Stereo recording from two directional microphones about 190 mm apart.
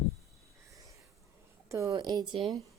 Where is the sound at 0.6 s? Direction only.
15° right (ahead or behind).